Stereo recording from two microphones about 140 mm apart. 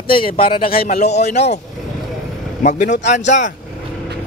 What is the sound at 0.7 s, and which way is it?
Speech, 90° left.